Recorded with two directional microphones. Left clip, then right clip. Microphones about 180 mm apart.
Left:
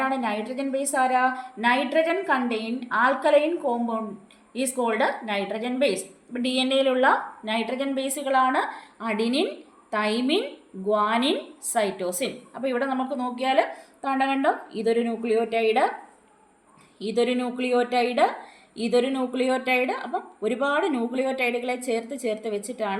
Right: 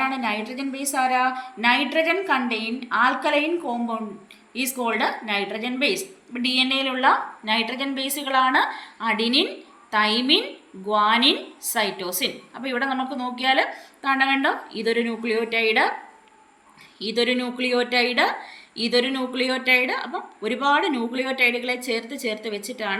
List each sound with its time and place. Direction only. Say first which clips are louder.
0.0 s a woman's voice: right 1 dB; 55° left (ahead or behind)
17.0 s a woman's voice: right 1 dB; 45° left (ahead or behind)